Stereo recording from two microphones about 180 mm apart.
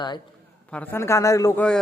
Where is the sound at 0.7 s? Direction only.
10° left (ahead or behind).